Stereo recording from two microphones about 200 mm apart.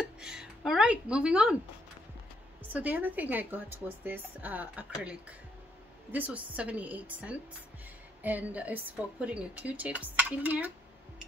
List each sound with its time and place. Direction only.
0.2 s speech: 5° right (ahead or behind)
2.7 s a woman's voice: 10° right (ahead or behind)
6.1 s a woman's voice: 5° right (ahead or behind)